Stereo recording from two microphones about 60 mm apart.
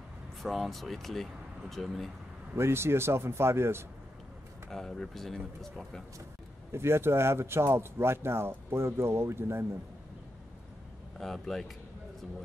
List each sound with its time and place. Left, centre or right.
0.4 s speech: centre
2.5 s speech: right
4.6 s speech: centre
6.7 s speech: right
11.1 s speech: centre